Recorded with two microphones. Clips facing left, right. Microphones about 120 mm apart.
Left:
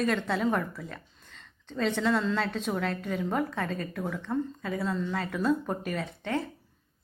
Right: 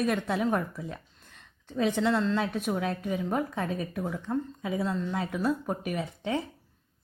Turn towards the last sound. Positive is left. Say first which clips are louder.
# right 1 dB
turn(degrees=-15)  # may be behind; listen again after turning